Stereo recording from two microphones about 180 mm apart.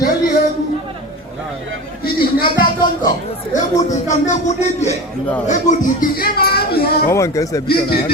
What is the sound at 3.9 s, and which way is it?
A man's voice, 40° left (ahead or behind).